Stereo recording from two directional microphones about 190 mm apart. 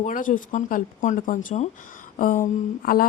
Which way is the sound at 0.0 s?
45° left (ahead or behind).